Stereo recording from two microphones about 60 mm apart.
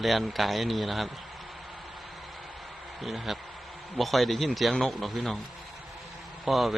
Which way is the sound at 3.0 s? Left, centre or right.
Centre.